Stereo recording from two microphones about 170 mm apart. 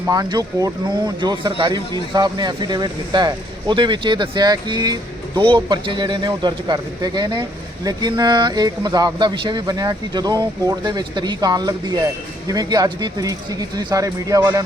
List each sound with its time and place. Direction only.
0.0 s speech: 20° right (ahead or behind)